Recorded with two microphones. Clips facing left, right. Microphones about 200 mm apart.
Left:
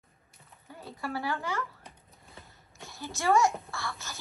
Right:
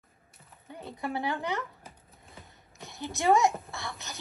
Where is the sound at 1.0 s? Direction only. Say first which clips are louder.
Right 2 dB; 20° right (ahead or behind).